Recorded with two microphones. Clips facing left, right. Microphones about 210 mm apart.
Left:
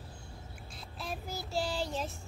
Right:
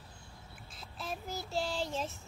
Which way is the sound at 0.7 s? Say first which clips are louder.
Even; centre (ahead or behind).